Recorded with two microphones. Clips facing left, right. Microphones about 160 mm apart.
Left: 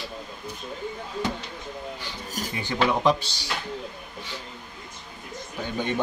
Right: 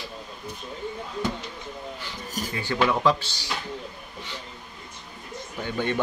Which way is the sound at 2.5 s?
15° left (ahead or behind).